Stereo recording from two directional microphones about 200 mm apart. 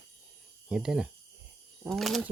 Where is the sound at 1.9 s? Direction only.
Centre (ahead or behind).